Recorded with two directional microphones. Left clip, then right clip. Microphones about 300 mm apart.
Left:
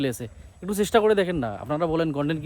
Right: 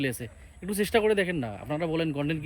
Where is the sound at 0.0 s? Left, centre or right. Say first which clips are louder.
Left 3 dB; centre.